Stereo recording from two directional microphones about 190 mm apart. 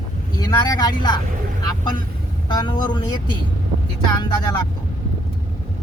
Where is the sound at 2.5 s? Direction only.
25° left (ahead or behind).